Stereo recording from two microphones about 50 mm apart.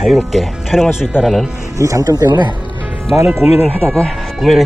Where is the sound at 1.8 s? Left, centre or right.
Right.